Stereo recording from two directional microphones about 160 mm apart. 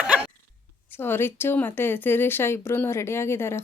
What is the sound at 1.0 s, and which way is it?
Speech, 15° left (ahead or behind).